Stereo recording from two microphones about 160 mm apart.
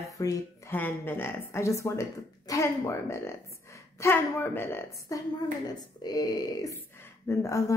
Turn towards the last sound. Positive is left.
turn(degrees=20)  # may be behind; listen again after turning